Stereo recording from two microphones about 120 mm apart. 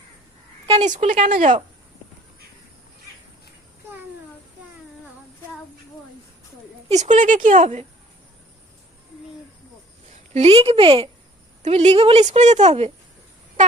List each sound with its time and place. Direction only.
1.0 s speech: 85° right
6.8 s speech: 70° right (ahead or behind)
10.3 s speech: 55° right (ahead or behind)
11.6 s a woman's voice: 65° right (ahead or behind)